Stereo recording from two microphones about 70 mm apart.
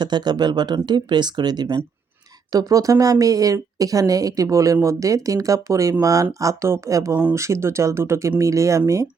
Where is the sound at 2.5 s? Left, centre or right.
Right.